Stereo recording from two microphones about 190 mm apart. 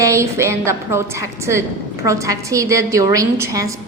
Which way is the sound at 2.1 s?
15° right (ahead or behind).